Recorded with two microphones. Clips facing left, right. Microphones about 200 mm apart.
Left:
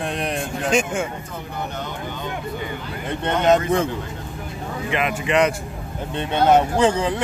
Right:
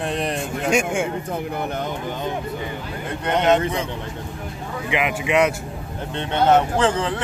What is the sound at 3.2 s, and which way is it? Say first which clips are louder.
Speech: left 1 dB; 40° left (ahead or behind).